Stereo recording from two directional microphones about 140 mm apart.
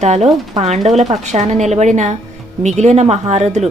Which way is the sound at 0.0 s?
55° right (ahead or behind).